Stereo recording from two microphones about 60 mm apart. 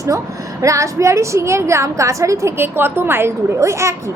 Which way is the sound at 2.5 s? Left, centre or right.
Right.